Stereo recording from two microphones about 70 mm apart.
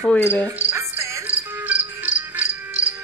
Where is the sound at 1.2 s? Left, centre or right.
Right.